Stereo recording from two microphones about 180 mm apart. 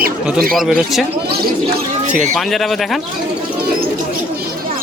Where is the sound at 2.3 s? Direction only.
Centre (ahead or behind).